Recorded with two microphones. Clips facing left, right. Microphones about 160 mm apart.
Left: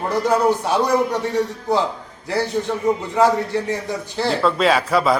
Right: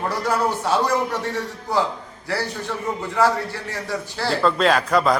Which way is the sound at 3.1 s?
20° left (ahead or behind).